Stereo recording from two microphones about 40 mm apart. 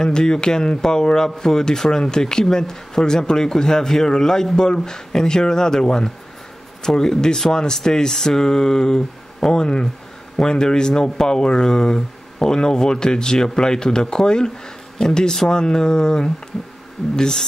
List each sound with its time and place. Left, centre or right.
0.0 s speech: centre
16.5 s insect: centre
17.1 s speech: centre